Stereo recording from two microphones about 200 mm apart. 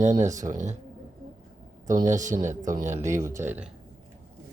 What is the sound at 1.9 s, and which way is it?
Speech, 40° right (ahead or behind).